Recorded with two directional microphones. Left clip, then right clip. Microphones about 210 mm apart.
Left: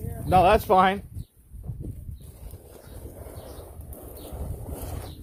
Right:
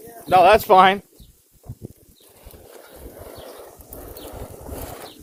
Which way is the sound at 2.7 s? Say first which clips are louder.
Right 5 dB; 25° right (ahead or behind).